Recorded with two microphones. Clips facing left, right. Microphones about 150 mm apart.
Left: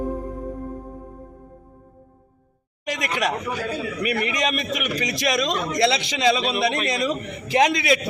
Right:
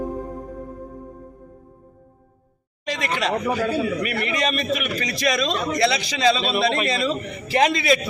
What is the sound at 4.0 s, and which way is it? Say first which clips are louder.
A man's voice: even; 10° left (ahead or behind).